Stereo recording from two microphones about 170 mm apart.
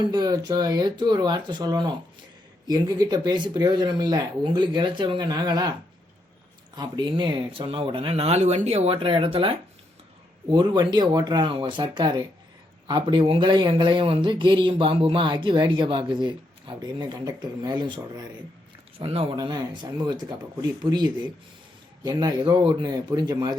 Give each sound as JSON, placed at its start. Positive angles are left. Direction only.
{"t": 0.0, "sound": "speech", "side_deg": -25}
{"t": 6.7, "sound": "speech", "side_deg": -25}
{"t": 19.4, "sound": "speech", "side_deg": -25}